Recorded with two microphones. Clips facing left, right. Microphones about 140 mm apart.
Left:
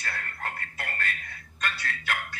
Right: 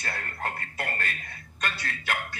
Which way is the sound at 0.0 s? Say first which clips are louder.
Right 2 dB; 25° right (ahead or behind).